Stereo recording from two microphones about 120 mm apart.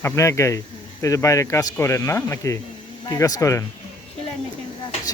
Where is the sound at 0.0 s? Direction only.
25° left (ahead or behind).